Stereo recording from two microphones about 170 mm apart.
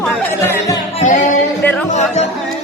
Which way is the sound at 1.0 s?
45° left (ahead or behind).